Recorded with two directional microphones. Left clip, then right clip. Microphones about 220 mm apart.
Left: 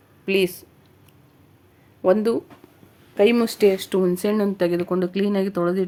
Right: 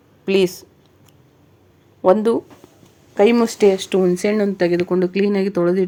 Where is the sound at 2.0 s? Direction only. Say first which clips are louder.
Right 4 dB; 10° right (ahead or behind).